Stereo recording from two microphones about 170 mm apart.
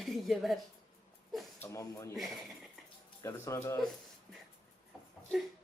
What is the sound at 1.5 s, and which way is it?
Speech, 15° left (ahead or behind).